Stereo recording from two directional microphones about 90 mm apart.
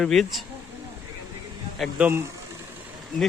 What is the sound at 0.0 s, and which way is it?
Speech, 5° left (ahead or behind).